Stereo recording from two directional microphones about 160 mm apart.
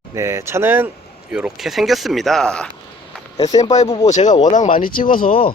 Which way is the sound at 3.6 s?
40° left (ahead or behind).